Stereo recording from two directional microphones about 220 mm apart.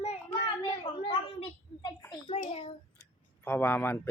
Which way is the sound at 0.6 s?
25° left (ahead or behind).